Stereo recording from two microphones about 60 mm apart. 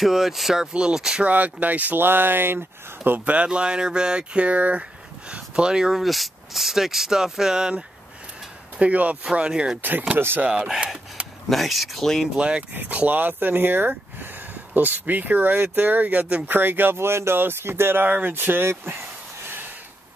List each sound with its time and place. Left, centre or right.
0.0 s speech: centre
1.2 s speech: right
3.0 s speech: right
8.7 s speech: right
9.8 s speech: right
10.4 s speech: centre
11.4 s speech: centre
12.4 s speech: centre
12.7 s speech: right
18.0 s speech: right